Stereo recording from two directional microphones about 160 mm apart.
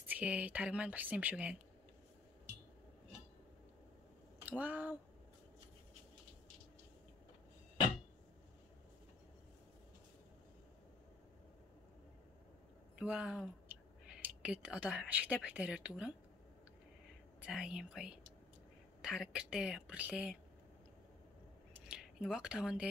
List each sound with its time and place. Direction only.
0.0 s speech: 10° right (ahead or behind)
4.5 s speech: 10° right (ahead or behind)
13.0 s speech: 5° right (ahead or behind)
17.4 s speech: 5° right (ahead or behind)
21.8 s speech: 5° right (ahead or behind)